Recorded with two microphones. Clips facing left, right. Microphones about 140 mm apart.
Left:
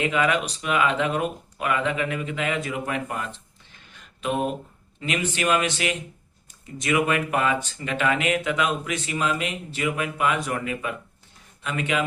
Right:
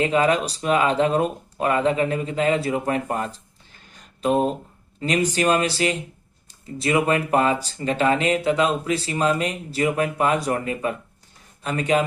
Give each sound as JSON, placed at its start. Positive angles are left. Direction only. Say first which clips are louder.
{"t": 0.0, "sound": "speech", "louder": "right 4 dB", "side_deg": -35}